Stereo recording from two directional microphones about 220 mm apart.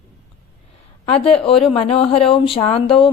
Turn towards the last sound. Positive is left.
turn(degrees=25)  # may be behind; listen again after turning